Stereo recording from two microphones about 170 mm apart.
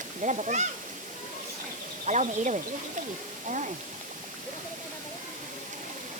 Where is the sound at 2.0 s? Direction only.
45° right (ahead or behind).